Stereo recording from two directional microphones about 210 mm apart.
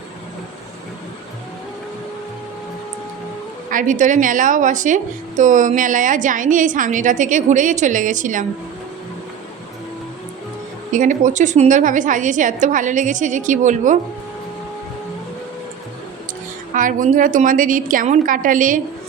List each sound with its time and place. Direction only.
3.7 s a woman's voice: 40° right (ahead or behind)
10.9 s a woman's voice: 35° right (ahead or behind)
16.7 s a woman's voice: 40° right (ahead or behind)